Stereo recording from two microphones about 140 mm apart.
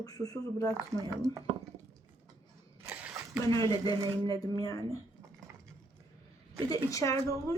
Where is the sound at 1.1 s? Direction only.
25° right (ahead or behind).